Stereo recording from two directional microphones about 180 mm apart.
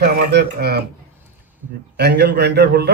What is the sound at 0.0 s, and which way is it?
Speech, 65° right (ahead or behind).